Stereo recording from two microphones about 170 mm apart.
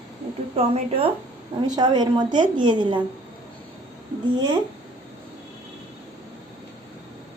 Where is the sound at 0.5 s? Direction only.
35° right (ahead or behind).